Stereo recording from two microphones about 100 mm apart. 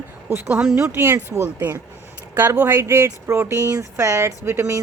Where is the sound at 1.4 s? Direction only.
20° right (ahead or behind).